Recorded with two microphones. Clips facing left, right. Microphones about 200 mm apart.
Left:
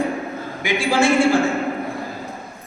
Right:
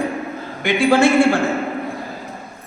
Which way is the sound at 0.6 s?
60° right (ahead or behind).